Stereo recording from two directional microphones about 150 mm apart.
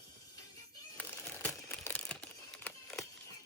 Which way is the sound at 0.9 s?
10° left (ahead or behind).